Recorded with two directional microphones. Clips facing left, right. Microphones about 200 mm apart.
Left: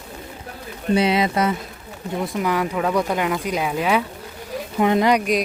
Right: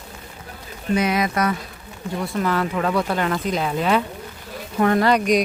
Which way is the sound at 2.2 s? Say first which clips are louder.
Even; 15° left (ahead or behind).